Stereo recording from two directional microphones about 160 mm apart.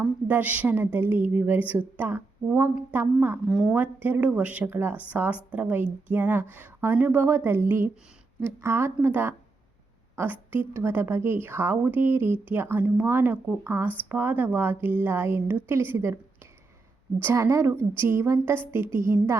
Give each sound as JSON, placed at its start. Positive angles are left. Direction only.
{"t": 0.0, "sound": "a woman's voice", "side_deg": -10}
{"t": 3.4, "sound": "a woman's voice", "side_deg": 0}
{"t": 17.2, "sound": "a woman's voice", "side_deg": -15}